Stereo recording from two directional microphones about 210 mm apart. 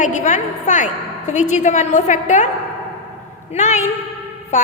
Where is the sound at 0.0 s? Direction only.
35° left (ahead or behind).